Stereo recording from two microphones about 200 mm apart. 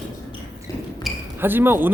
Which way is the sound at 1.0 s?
10° right (ahead or behind).